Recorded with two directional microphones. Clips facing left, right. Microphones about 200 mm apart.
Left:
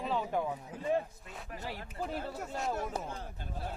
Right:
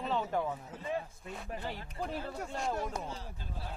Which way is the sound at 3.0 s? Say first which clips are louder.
Left 1 dB; 55° left (ahead or behind).